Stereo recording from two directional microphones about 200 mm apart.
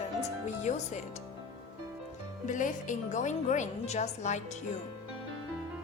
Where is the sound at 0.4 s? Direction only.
35° left (ahead or behind).